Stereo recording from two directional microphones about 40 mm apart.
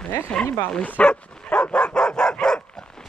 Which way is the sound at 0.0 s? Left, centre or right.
Left.